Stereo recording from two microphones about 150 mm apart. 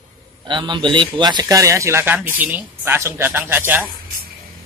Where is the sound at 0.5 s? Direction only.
30° right (ahead or behind); by 3.8 s 15° right (ahead or behind).